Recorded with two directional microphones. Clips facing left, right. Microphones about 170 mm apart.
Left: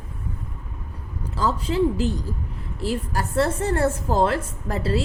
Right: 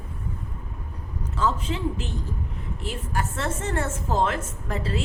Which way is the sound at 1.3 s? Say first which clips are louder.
Left 3 dB; 35° left (ahead or behind).